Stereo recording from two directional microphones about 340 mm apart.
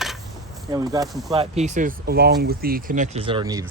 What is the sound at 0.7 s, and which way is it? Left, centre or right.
Speech, centre.